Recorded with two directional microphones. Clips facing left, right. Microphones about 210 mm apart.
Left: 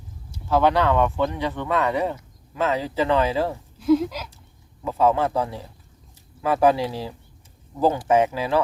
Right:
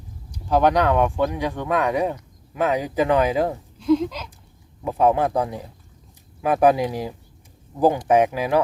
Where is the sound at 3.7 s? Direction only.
5° left (ahead or behind).